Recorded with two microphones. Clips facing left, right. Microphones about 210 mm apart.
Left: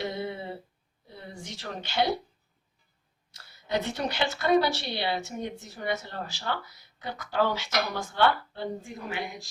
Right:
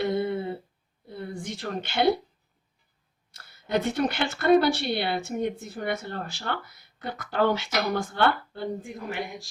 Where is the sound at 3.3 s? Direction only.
55° right (ahead or behind).